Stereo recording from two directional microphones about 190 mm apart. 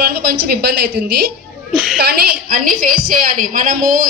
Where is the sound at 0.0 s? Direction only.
55° right (ahead or behind).